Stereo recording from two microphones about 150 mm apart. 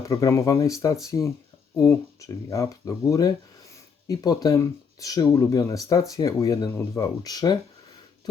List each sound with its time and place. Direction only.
0.0 s speech: 20° left (ahead or behind)